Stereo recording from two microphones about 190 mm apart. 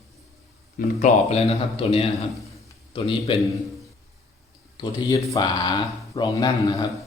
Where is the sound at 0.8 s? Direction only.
50° left (ahead or behind).